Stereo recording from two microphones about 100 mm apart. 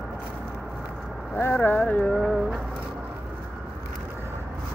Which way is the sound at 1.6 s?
15° left (ahead or behind).